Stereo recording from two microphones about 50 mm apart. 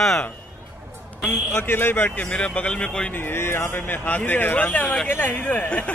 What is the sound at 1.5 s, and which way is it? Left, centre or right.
Speech, left.